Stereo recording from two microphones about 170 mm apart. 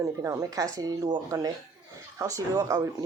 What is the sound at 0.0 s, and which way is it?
Speech, 20° right (ahead or behind).